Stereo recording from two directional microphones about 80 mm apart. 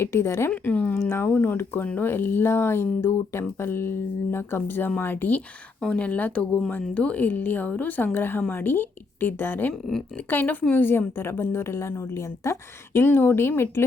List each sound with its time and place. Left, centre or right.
0.0 s a woman's voice: left
0.5 s a woman's voice: centre